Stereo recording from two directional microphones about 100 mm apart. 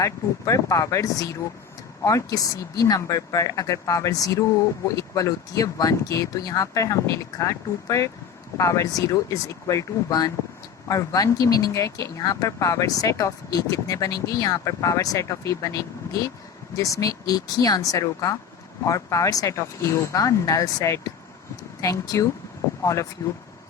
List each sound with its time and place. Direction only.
0.0 s speech: 35° left (ahead or behind)